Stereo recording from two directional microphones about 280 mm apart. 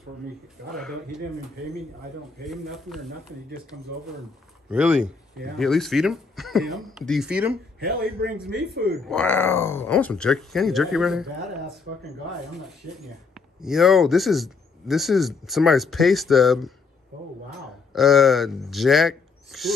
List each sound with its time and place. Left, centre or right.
2.4 s speech: centre
4.6 s speech: centre
7.8 s a man's voice: right
9.0 s speech: centre
13.3 s speech: centre
17.9 s speech: centre